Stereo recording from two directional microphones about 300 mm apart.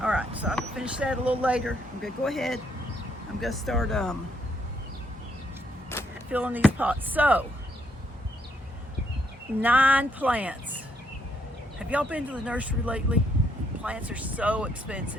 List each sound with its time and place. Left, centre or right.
0.0 s speech: centre
5.9 s vehicle: centre
6.3 s speech: centre
9.6 s speech: centre
11.8 s speech: centre